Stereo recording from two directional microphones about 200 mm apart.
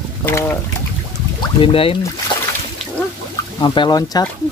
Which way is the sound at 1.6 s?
25° left (ahead or behind).